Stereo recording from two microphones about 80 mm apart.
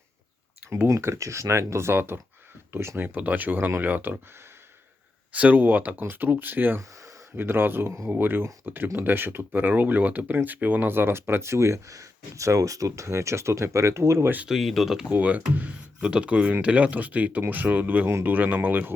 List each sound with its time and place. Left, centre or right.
0.9 s speech: right
5.3 s speech: centre; by 14.3 s right
14.4 s speech: centre
15.1 s speech: centre